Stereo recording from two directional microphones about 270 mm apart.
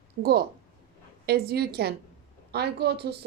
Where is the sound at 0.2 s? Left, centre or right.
Right.